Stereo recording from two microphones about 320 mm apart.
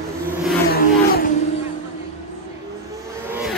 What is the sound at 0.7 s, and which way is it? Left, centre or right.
Vehicle, left.